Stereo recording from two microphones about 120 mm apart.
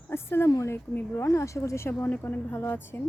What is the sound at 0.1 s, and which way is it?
Speech, 20° left (ahead or behind).